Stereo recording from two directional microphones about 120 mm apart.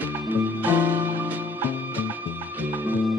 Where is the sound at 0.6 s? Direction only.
15° right (ahead or behind).